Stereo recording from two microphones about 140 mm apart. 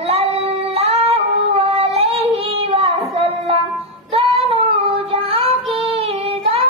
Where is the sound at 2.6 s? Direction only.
45° right (ahead or behind).